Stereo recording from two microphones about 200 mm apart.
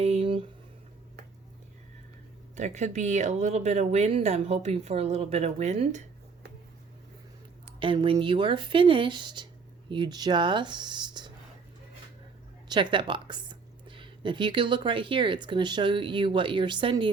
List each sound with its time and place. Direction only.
0.0 s a sound: 30° right (ahead or behind)
2.6 s speech: 35° right (ahead or behind)
7.8 s speech: 25° right (ahead or behind)
12.6 s speech: 25° right (ahead or behind)